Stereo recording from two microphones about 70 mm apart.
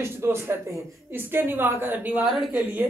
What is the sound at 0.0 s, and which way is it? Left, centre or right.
A woman's voice, right.